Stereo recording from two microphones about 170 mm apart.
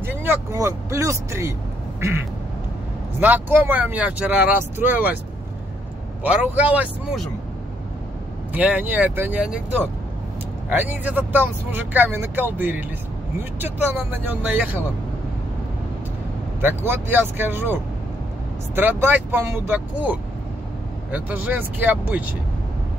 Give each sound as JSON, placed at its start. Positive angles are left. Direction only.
{"t": 0.0, "sound": "speech", "side_deg": -15}
{"t": 2.0, "sound": "quack", "side_deg": -15}
{"t": 3.2, "sound": "speech", "side_deg": -10}
{"t": 6.2, "sound": "speech", "side_deg": -10}
{"t": 8.5, "sound": "speech", "side_deg": -10}
{"t": 16.6, "sound": "speech", "side_deg": -10}
{"t": 18.8, "sound": "speech", "side_deg": -10}